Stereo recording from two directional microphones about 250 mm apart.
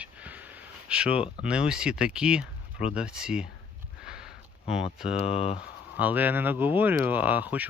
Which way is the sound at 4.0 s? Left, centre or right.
Centre.